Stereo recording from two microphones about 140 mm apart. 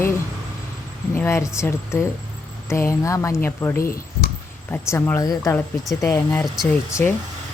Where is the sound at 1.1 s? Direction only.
20° left (ahead or behind).